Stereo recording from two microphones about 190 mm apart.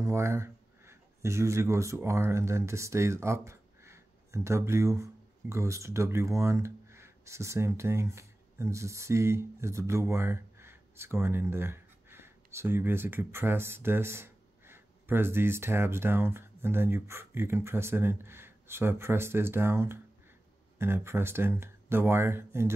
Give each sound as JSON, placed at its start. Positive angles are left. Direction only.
{"t": 0.0, "sound": "speech", "side_deg": -15}